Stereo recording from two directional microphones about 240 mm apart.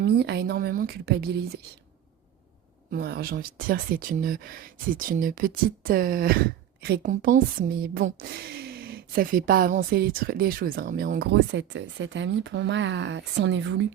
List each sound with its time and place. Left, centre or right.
0.0 s speech: right
2.9 s speech: right